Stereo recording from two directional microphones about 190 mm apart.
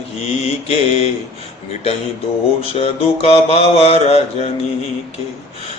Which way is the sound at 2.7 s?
30° left (ahead or behind).